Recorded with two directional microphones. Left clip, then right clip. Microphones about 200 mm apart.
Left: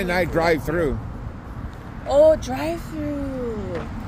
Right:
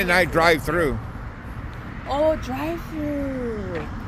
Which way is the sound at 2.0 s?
35° left (ahead or behind).